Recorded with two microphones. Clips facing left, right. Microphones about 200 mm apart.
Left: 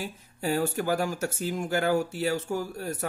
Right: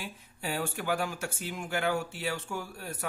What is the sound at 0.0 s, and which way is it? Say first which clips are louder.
Speech: left 7 dB; 40° left (ahead or behind).